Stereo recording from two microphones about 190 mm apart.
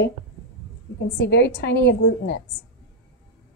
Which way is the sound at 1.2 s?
65° left (ahead or behind).